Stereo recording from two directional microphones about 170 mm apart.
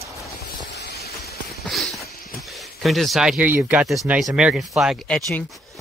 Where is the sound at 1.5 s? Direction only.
Centre (ahead or behind).